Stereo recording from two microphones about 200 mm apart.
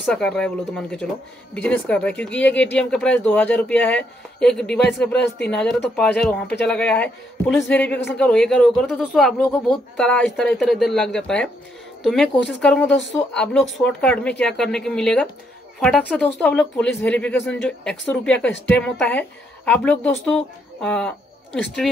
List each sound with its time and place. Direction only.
0.0 s speech: 5° left (ahead or behind)